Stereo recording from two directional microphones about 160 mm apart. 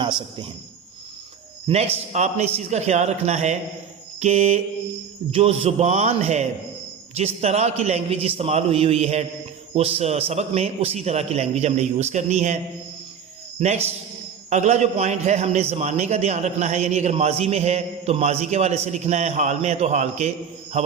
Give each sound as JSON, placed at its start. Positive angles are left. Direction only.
{"t": 0.0, "sound": "a man's voice", "side_deg": -30}
{"t": 1.6, "sound": "a man's voice", "side_deg": -40}
{"t": 13.6, "sound": "a man's voice", "side_deg": -40}